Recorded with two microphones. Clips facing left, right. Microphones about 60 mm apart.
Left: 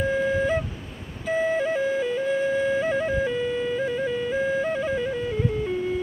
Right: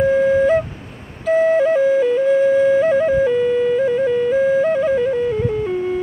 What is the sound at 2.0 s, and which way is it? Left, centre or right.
Music, centre.